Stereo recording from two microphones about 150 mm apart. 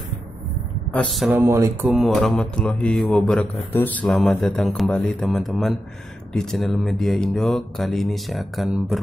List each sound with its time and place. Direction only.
0.9 s mantra: centre (ahead or behind)
1.4 s mantra: 15° right (ahead or behind)
1.9 s mantra: centre (ahead or behind)